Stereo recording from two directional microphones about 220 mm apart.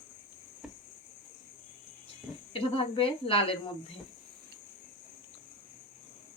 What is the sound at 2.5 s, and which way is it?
A woman's voice, 25° left (ahead or behind).